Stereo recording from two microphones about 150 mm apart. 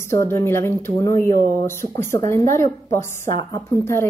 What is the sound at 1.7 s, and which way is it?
Speech, 15° left (ahead or behind).